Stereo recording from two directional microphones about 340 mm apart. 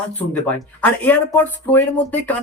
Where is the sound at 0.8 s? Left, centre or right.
Centre.